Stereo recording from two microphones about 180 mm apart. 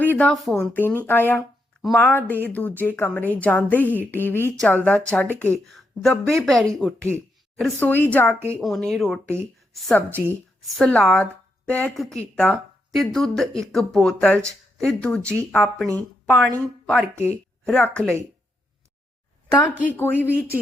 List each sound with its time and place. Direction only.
0.0 s a woman's voice: 10° left (ahead or behind)
8.4 s speech: 15° right (ahead or behind)
8.6 s a woman's voice: centre (ahead or behind)
17.0 s speech: 15° right (ahead or behind)
17.7 s speech: 5° left (ahead or behind)
19.7 s speech: 10° right (ahead or behind)
20.0 s a woman's voice: 10° left (ahead or behind)